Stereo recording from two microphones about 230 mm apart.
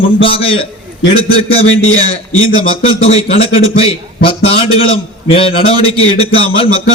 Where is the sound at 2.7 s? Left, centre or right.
Left.